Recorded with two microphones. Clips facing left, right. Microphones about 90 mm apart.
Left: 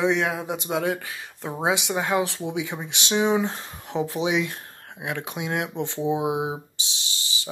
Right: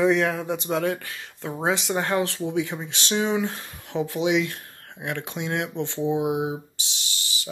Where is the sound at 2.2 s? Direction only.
15° left (ahead or behind).